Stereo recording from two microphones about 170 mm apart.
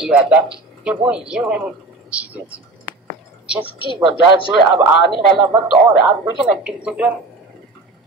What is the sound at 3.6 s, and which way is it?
Speech, 30° left (ahead or behind).